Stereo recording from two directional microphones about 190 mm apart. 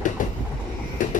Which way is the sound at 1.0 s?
45° left (ahead or behind).